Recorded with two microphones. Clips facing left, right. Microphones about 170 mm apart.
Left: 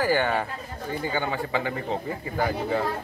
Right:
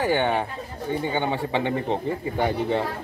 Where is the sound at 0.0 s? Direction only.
25° right (ahead or behind).